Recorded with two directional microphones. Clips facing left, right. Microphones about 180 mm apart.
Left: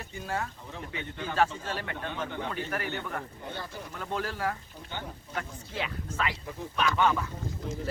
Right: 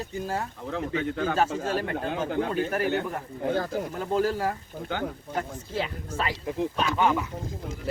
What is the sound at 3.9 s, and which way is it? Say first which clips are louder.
Speech: right 7 dB; 35° right (ahead or behind).